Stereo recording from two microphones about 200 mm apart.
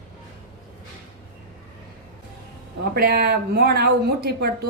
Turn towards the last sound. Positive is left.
turn(degrees=-50)  # may be behind; listen again after turning